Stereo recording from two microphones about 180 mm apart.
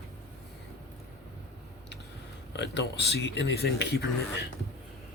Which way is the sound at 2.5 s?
70° left (ahead or behind).